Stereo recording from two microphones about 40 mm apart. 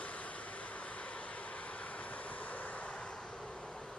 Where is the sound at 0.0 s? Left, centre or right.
Left.